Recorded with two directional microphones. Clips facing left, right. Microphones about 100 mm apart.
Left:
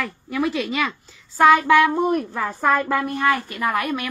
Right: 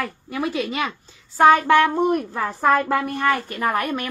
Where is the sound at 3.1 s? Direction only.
40° right (ahead or behind).